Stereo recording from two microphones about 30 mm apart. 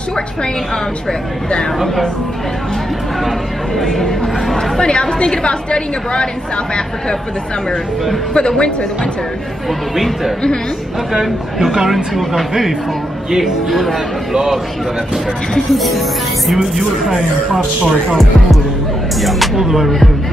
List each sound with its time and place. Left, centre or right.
3.3 s speech: centre
5.2 s a woman's voice: left
8.4 s a woman's voice: left
11.9 s speech: centre
15.7 s speech: centre
19.2 s speech: centre
19.5 s speech: centre